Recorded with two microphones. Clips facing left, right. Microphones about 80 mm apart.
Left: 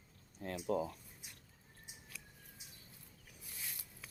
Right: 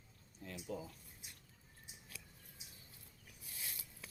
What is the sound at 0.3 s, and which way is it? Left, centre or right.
Speech, left.